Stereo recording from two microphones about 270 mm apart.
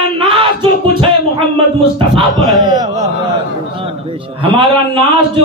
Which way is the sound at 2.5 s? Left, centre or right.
Centre.